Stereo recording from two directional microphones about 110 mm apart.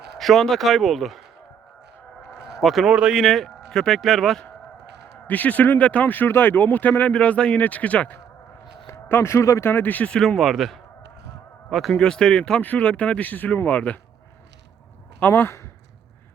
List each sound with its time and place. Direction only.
0.2 s speech: centre (ahead or behind)
2.3 s speech: centre (ahead or behind)
5.1 s speech: 15° left (ahead or behind)
15.2 s speech: 20° left (ahead or behind)